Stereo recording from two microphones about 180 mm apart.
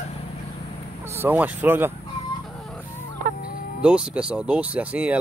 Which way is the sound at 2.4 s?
Centre (ahead or behind).